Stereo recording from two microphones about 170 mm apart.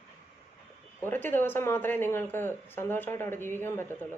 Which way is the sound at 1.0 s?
10° left (ahead or behind).